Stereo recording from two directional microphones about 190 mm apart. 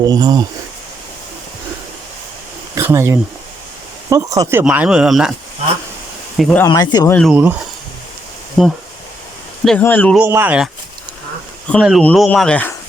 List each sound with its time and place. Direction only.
0.0 s speech: 20° right (ahead or behind)
2.7 s speech: 15° right (ahead or behind)
4.6 s speech: 5° right (ahead or behind)
6.3 s speech: centre (ahead or behind)
6.7 s speech: 20° left (ahead or behind)
7.1 s speech: 5° left (ahead or behind)
8.6 s speech: centre (ahead or behind)
10.2 s speech: 10° right (ahead or behind)
11.7 s speech: centre (ahead or behind)